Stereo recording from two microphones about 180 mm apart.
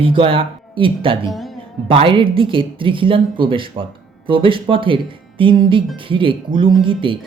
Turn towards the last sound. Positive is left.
turn(degrees=-30)  # may be behind; listen again after turning